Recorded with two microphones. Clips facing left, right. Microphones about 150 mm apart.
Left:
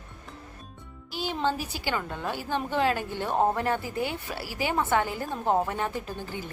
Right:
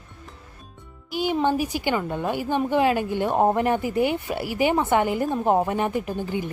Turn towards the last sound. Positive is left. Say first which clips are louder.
# right 8 dB
turn(degrees=-15)  # may be behind; listen again after turning